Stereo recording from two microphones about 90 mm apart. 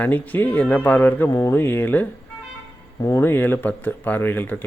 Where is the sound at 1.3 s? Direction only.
40° left (ahead or behind).